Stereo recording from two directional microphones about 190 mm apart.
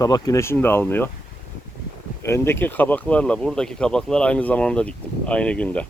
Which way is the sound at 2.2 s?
15° left (ahead or behind).